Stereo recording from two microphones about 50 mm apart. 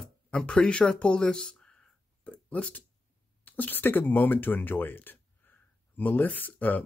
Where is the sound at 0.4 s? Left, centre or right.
Left.